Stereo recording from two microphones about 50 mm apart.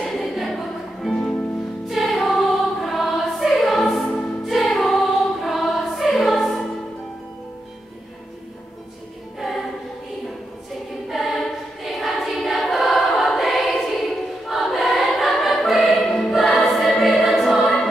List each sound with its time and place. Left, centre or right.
0.0 s music: centre
1.9 s choir: centre
9.4 s choir: centre
11.1 s choir: centre